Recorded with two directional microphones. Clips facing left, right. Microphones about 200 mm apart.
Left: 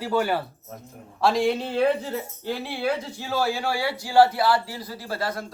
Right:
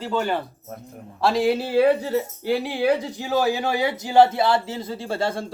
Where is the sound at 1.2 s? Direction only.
Centre (ahead or behind).